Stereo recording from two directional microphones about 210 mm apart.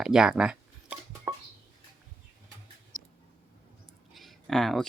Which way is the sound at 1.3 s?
10° right (ahead or behind).